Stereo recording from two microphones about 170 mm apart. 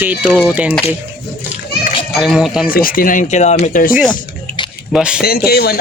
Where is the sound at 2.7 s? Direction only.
55° left (ahead or behind); by 3.8 s 40° left (ahead or behind).